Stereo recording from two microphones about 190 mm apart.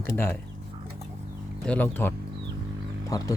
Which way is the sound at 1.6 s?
5° left (ahead or behind).